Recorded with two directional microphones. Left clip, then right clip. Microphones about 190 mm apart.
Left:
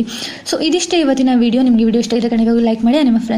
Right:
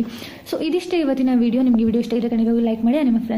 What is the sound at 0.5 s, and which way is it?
A woman's voice, 20° left (ahead or behind).